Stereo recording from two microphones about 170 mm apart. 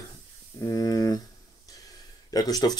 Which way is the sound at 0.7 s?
20° left (ahead or behind).